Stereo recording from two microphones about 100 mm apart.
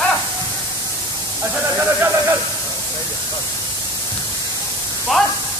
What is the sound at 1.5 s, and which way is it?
Speech, 15° right (ahead or behind).